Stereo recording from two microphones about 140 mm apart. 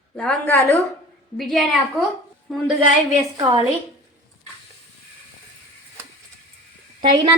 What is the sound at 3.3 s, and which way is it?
Speech, 25° right (ahead or behind).